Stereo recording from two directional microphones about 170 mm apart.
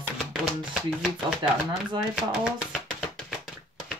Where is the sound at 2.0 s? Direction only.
Centre (ahead or behind).